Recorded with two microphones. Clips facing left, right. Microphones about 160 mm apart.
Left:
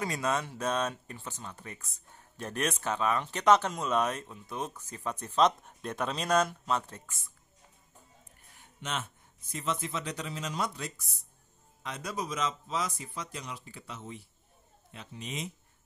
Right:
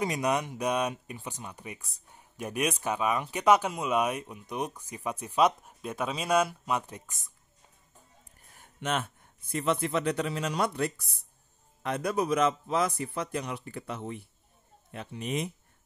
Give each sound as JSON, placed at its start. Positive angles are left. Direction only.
{"t": 0.0, "sound": "speech", "side_deg": -15}
{"t": 8.5, "sound": "a man's voice", "side_deg": -55}